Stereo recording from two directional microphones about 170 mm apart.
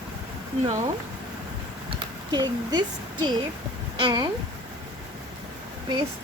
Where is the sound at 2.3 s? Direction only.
25° right (ahead or behind).